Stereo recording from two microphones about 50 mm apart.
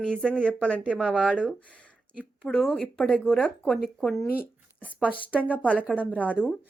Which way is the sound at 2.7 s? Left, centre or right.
Left.